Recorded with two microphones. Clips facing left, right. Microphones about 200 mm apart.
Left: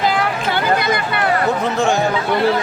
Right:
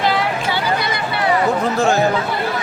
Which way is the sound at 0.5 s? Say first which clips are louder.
Left 3 dB; 50° left (ahead or behind).